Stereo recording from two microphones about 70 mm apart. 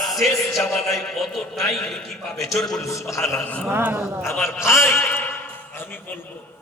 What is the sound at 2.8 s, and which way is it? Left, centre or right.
Speech, left.